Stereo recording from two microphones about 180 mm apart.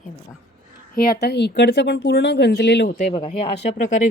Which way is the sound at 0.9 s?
60° left (ahead or behind).